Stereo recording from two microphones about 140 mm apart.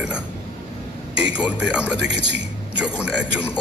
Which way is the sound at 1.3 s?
10° right (ahead or behind).